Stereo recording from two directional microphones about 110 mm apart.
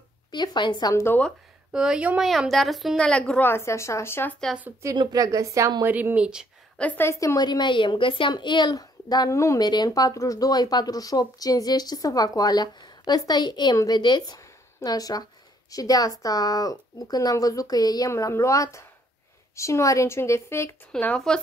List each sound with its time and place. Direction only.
0.3 s speech: 40° left (ahead or behind)
0.9 s speech: 20° left (ahead or behind)
1.7 s a woman's voice: 5° right (ahead or behind); by 4.4 s 20° left (ahead or behind)
4.9 s a woman's voice: 40° right (ahead or behind)
5.9 s speech: 15° right (ahead or behind)
6.8 s a woman's voice: 20° left (ahead or behind)
20.9 s a woman's voice: 5° left (ahead or behind)